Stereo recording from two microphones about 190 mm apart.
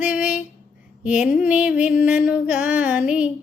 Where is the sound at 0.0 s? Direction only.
10° right (ahead or behind).